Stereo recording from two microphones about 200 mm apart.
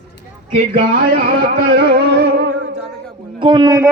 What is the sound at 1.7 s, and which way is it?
Music, 55° right (ahead or behind).